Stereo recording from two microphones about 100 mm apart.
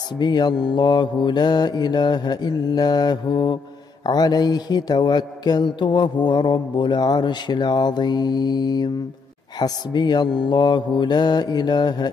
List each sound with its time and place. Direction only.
0.2 s mantra: 45° left (ahead or behind)